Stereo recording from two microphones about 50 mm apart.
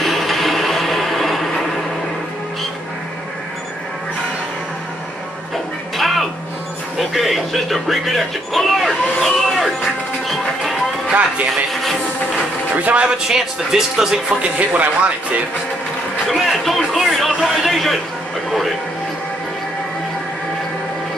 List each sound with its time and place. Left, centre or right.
0.0 s music: centre
5.9 s music: centre
7.0 s speech: centre
11.1 s speech: right
12.7 s speech: right
13.3 s speech: centre
14.7 s speech: right
16.3 s a man's voice: centre